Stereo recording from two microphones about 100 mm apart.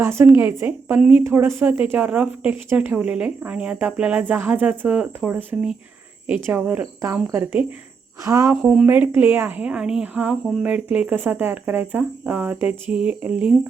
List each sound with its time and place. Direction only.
0.0 s a woman's voice: 25° right (ahead or behind)
1.2 s a woman's voice: 25° right (ahead or behind)
8.6 s speech: 15° right (ahead or behind)